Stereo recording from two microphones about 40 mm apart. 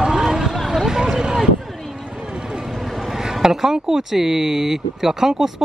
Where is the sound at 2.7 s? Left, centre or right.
Centre.